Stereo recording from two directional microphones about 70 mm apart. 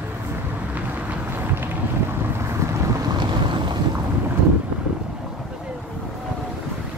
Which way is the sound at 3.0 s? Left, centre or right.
Right.